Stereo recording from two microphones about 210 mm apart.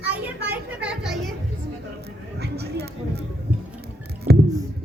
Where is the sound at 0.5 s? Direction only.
5° right (ahead or behind).